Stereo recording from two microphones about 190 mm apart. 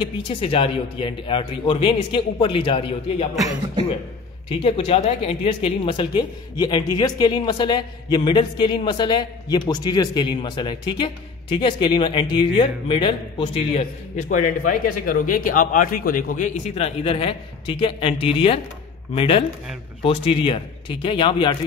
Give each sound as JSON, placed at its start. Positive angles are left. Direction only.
{"t": 0.0, "sound": "a man's voice", "side_deg": 30}
{"t": 4.5, "sound": "a man's voice", "side_deg": 30}